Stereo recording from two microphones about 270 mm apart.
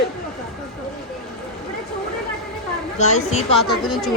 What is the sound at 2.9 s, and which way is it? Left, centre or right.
Speech, left.